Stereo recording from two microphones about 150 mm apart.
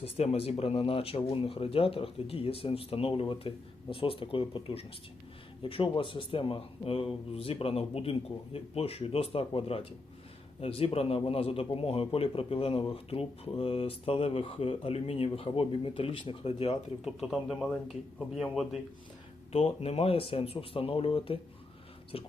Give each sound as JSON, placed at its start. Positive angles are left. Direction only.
{"t": 0.0, "sound": "a man's voice", "side_deg": 45}
{"t": 17.0, "sound": "speech", "side_deg": -5}
{"t": 19.5, "sound": "a man's voice", "side_deg": 40}